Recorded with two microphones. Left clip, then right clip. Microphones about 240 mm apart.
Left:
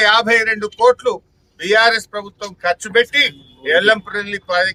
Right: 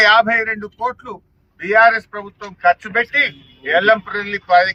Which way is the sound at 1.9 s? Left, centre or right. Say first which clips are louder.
Left 2 dB; centre.